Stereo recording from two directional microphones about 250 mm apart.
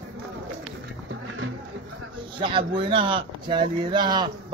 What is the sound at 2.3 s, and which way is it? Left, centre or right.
Speech, centre.